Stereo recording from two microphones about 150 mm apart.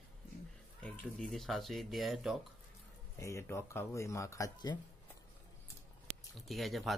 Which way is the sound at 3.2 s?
20° left (ahead or behind).